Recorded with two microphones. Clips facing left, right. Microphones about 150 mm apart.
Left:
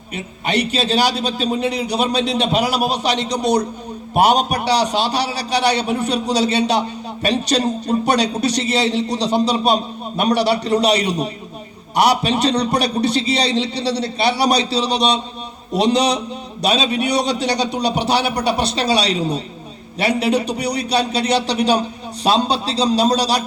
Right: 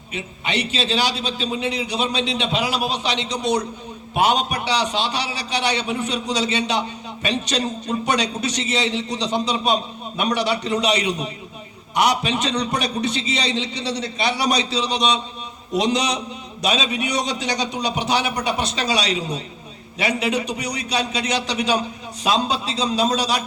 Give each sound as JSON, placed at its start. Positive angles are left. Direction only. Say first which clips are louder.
{"t": 0.4, "sound": "a man's voice", "louder": "left 5 dB", "side_deg": 40}